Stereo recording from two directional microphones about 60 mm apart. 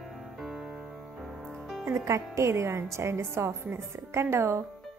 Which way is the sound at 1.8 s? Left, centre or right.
Right.